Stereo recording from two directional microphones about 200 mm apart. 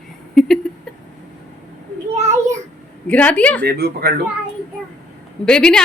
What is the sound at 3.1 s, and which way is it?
Speech, 5° left (ahead or behind).